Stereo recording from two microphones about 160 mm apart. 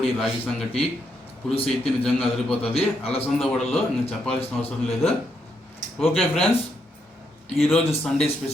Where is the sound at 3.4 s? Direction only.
Centre (ahead or behind).